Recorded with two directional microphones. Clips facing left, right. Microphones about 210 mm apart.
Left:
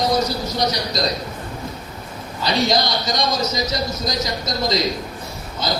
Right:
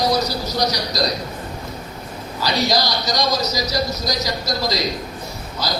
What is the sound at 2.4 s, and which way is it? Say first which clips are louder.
A man's voice: left 1 dB; 25° left (ahead or behind).